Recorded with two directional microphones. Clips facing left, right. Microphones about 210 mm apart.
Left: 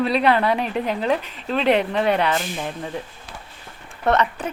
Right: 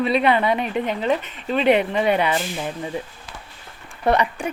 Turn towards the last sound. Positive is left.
turn(degrees=-10)  # may be behind; listen again after turning